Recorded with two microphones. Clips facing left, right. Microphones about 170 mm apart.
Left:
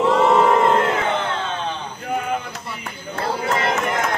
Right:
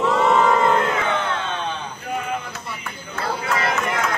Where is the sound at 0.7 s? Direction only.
30° left (ahead or behind).